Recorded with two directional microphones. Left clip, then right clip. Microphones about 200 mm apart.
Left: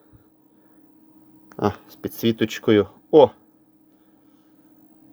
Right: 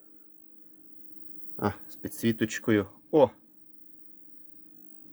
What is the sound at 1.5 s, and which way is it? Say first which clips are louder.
Speech: left 8 dB; 25° left (ahead or behind).